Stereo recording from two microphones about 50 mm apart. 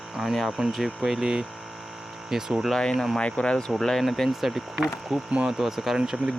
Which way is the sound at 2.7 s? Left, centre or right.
Centre.